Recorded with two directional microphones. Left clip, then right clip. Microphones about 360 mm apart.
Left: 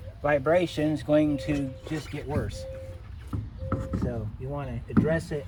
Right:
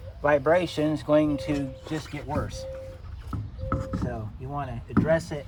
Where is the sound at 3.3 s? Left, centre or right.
Centre.